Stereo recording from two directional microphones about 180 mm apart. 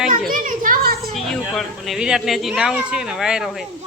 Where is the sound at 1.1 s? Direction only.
Centre (ahead or behind).